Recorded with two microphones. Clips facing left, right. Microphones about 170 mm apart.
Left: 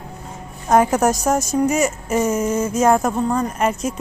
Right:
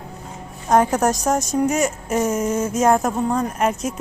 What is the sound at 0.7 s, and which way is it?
A woman's voice, 5° left (ahead or behind).